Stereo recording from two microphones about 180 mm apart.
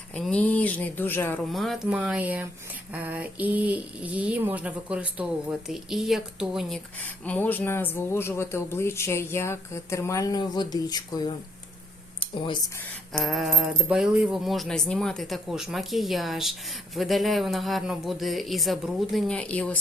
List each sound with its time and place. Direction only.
0.1 s a man's voice: 5° left (ahead or behind)
7.0 s a man's voice: 10° left (ahead or behind); by 12.5 s 25° left (ahead or behind)
13.1 s speech: centre (ahead or behind)